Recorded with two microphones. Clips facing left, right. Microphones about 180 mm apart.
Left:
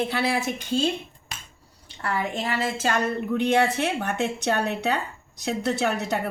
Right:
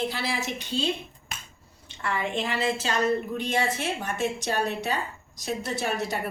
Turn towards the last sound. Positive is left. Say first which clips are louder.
# left 4 dB
turn(degrees=65)  # may be behind; listen again after turning